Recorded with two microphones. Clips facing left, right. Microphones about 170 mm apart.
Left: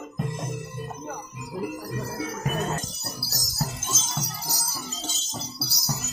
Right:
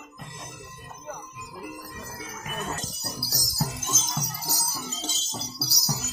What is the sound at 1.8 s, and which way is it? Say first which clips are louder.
Music: left 9 dB; 40° left (ahead or behind).